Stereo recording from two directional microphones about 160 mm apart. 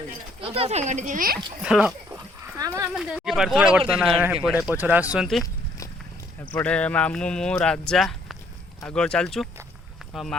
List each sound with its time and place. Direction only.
0.4 s speech: 35° right (ahead or behind); by 1.4 s 60° right (ahead or behind)
1.6 s speech: 5° right (ahead or behind)
2.4 s dog: 20° right (ahead or behind)
2.9 s speech: centre (ahead or behind)
6.5 s speech: 10° left (ahead or behind)